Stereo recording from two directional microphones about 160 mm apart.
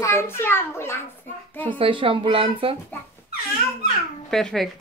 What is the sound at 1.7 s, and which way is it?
Speech, 30° right (ahead or behind).